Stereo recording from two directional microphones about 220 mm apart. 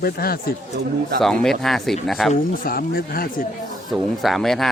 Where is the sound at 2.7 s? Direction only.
40° left (ahead or behind).